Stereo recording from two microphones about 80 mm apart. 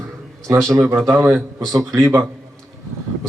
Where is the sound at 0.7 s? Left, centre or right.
Right.